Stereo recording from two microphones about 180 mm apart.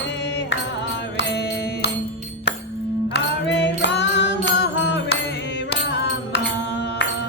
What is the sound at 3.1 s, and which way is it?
Music, 75° left (ahead or behind).